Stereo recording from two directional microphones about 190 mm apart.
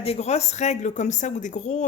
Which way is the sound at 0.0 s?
35° left (ahead or behind).